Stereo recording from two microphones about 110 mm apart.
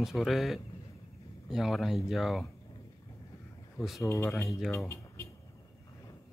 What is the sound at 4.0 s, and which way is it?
Speech, 25° left (ahead or behind).